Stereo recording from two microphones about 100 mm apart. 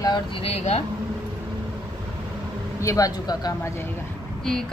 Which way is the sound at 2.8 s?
35° left (ahead or behind).